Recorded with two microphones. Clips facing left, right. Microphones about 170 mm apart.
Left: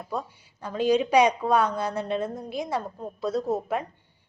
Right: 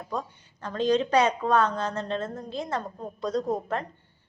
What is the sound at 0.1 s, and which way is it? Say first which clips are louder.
A woman's voice: left 1 dB; 10° left (ahead or behind).